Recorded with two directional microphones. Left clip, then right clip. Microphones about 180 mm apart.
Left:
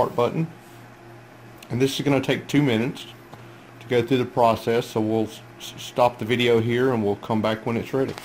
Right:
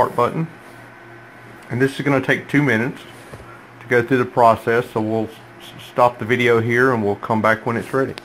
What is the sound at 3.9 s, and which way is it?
Speech, 5° left (ahead or behind).